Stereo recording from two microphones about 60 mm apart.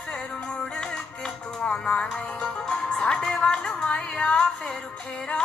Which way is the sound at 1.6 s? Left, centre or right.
Centre.